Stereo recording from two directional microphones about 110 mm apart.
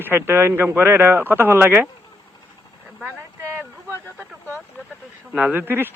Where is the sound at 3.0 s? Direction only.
15° right (ahead or behind).